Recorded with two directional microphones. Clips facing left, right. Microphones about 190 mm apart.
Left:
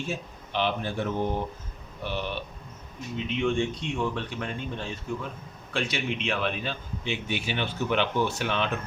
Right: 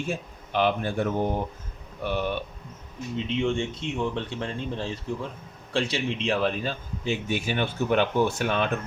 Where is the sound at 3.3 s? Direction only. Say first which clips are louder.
Left 1 dB; 25° right (ahead or behind).